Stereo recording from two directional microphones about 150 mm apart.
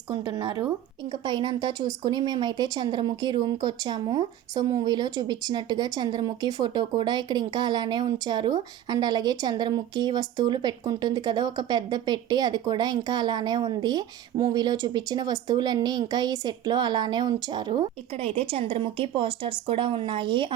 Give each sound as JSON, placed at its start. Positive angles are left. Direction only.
{"t": 0.1, "sound": "speech", "side_deg": -30}